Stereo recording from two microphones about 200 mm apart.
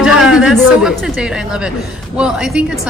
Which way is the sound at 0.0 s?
5° right (ahead or behind).